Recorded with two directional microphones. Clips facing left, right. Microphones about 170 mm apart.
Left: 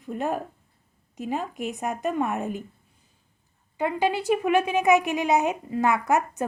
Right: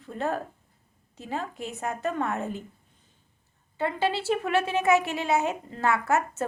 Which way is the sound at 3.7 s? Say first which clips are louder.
Left 2 dB; 15° left (ahead or behind).